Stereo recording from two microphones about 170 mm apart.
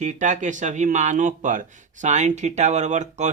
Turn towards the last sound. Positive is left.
turn(degrees=-45)  # may be behind; listen again after turning